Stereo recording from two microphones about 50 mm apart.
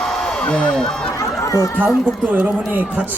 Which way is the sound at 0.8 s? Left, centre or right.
Centre.